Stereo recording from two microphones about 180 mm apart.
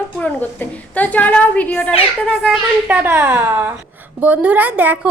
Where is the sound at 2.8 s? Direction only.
10° right (ahead or behind).